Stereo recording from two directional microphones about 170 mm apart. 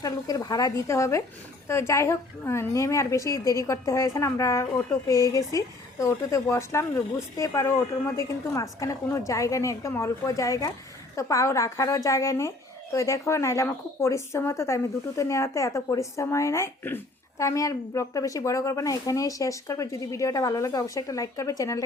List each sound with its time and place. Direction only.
0.0 s a woman's voice: 20° left (ahead or behind)